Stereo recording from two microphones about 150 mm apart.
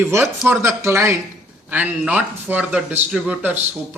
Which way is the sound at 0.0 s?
15° right (ahead or behind).